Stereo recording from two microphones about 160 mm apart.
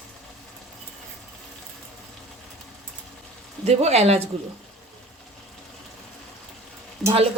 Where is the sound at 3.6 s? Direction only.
40° right (ahead or behind).